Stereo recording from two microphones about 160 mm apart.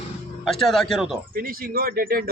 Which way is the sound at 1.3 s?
65° right (ahead or behind).